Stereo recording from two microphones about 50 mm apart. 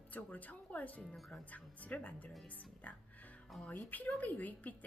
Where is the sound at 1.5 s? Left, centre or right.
Left.